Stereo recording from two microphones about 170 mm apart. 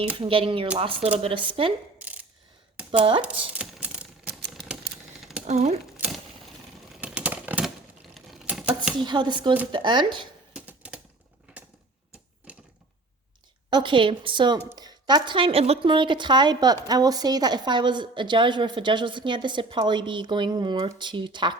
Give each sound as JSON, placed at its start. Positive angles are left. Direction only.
{"t": 0.2, "sound": "speech", "side_deg": -30}
{"t": 2.0, "sound": "mechanisms", "side_deg": -10}
{"t": 3.2, "sound": "typing", "side_deg": -5}
{"t": 4.2, "sound": "typewriter", "side_deg": -70}
{"t": 5.5, "sound": "speech", "side_deg": -40}
{"t": 7.0, "sound": "a sound", "side_deg": -10}
{"t": 8.1, "sound": "typing", "side_deg": 0}
{"t": 9.0, "sound": "speech", "side_deg": -25}
{"t": 10.5, "sound": "typewriter", "side_deg": -10}
{"t": 12.5, "sound": "a sound", "side_deg": -10}
{"t": 13.7, "sound": "speech", "side_deg": -25}